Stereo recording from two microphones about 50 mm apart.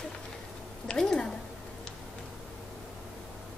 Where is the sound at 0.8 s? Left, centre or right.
Centre.